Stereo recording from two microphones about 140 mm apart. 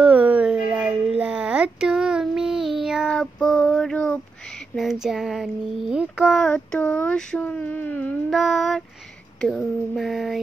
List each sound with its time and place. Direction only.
0.0 s a sound: 10° right (ahead or behind)
2.8 s child singing: centre (ahead or behind)
4.7 s child singing: centre (ahead or behind)
8.3 s child singing: centre (ahead or behind)